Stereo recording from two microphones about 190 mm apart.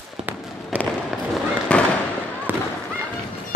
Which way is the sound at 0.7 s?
5° right (ahead or behind).